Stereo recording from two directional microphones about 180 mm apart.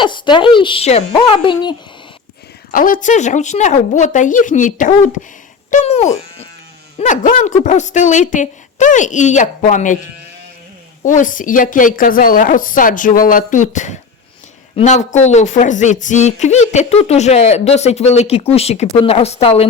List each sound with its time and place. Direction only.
0.0 s speech: 25° left (ahead or behind)
2.7 s a woman's voice: 50° left (ahead or behind)
5.7 s sheep: 35° left (ahead or behind)
7.0 s a woman's voice: 45° left (ahead or behind)
11.0 s a woman's voice: 45° left (ahead or behind)